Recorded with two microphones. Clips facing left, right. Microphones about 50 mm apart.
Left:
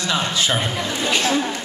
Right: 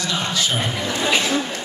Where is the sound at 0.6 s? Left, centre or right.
Centre.